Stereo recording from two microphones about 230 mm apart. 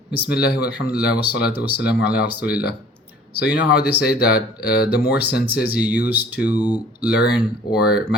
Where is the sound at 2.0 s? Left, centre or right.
Left.